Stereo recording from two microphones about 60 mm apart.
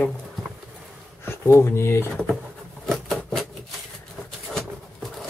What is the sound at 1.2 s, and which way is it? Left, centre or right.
Speech, left.